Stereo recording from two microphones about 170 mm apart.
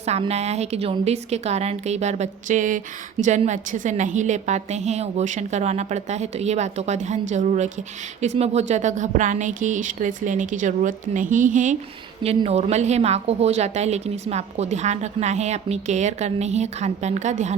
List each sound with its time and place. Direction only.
0.0 s a woman's voice: 40° right (ahead or behind)
12.2 s a woman's voice: 35° right (ahead or behind)